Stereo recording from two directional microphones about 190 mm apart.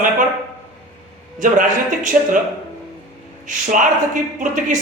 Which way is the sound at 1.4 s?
40° right (ahead or behind).